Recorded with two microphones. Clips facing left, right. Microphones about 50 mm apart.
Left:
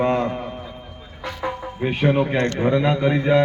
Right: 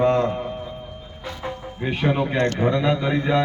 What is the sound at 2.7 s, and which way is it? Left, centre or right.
Speech, centre.